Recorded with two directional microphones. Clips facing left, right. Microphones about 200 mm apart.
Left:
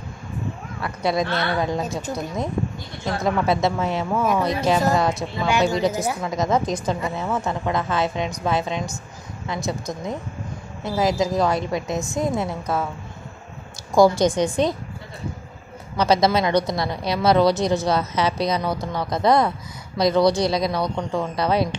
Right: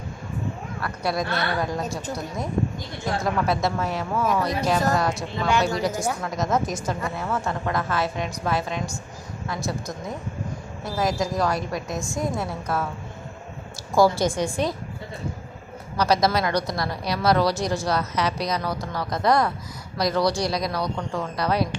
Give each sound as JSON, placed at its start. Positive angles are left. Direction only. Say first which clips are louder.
{"t": 0.8, "sound": "a woman's voice", "louder": "left 4 dB", "side_deg": 20}
{"t": 1.8, "sound": "a woman's voice", "louder": "left 2 dB", "side_deg": 0}
{"t": 3.4, "sound": "a woman's voice", "louder": "left 3 dB", "side_deg": 25}
{"t": 6.0, "sound": "a woman's voice", "louder": "left 3 dB", "side_deg": 0}
{"t": 7.2, "sound": "a woman's voice", "louder": "left 2 dB", "side_deg": 20}
{"t": 13.9, "sound": "a woman's voice", "louder": "left 4 dB", "side_deg": 15}
{"t": 16.0, "sound": "a woman's voice", "louder": "left 3 dB", "side_deg": 25}